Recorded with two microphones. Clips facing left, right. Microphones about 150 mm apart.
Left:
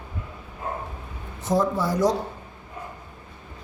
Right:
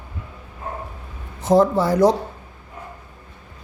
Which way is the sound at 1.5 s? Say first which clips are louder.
Right 7 dB; 70° right (ahead or behind).